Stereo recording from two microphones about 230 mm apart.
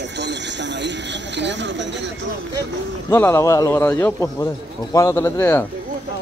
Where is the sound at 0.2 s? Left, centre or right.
Right.